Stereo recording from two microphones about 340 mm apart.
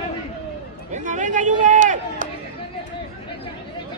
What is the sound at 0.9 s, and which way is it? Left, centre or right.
Speech, right.